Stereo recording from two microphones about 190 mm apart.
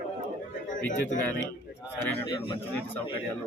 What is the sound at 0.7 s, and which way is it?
Speech, 45° left (ahead or behind).